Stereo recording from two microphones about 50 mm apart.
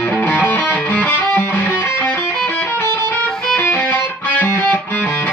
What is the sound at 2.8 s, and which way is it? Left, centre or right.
Music, left.